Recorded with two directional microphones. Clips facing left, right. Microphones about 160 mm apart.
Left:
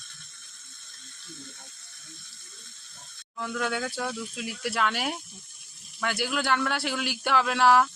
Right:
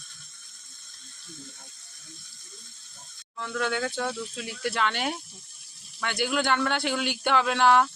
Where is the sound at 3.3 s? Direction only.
5° left (ahead or behind).